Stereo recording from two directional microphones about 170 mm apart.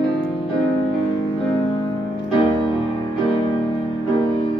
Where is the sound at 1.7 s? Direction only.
30° left (ahead or behind).